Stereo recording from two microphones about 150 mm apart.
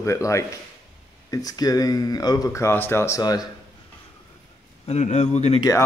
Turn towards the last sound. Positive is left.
turn(degrees=20)  # may be behind; listen again after turning